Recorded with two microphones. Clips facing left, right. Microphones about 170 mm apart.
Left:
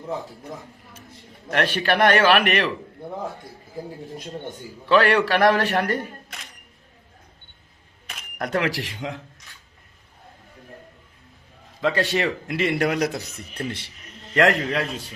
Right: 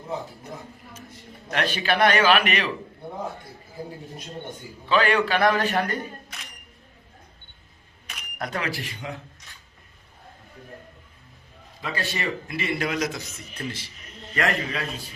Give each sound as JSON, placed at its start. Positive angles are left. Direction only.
{"t": 1.6, "sound": "a man's voice", "side_deg": 60}
{"t": 4.9, "sound": "speech", "side_deg": 70}
{"t": 8.4, "sound": "speech", "side_deg": 70}
{"t": 11.8, "sound": "speech", "side_deg": 80}
{"t": 13.1, "sound": "speech", "side_deg": 35}
{"t": 14.3, "sound": "speech", "side_deg": 70}